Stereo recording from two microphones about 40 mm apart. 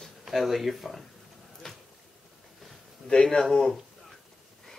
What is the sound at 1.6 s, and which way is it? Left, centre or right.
Boat, centre.